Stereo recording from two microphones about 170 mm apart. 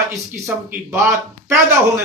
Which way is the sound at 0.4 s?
15° right (ahead or behind).